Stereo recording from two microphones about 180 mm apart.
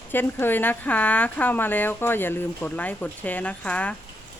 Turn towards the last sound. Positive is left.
turn(degrees=5)  # may be behind; listen again after turning